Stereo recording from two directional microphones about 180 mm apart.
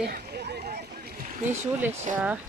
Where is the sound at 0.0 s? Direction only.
60° right (ahead or behind).